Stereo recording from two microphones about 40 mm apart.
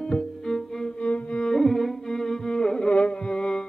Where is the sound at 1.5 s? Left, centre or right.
Centre.